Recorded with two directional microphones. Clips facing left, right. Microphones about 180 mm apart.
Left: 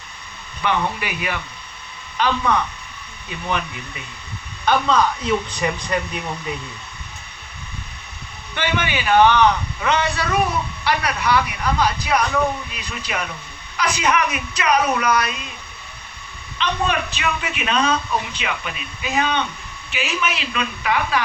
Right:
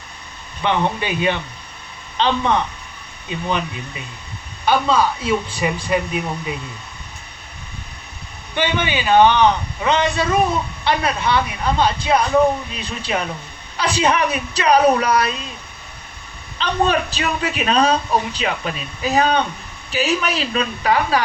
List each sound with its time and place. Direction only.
0.6 s a man's voice: 25° right (ahead or behind)
4.6 s speech: 10° right (ahead or behind)
8.5 s a man's voice: 20° right (ahead or behind)
16.6 s a man's voice: 35° right (ahead or behind)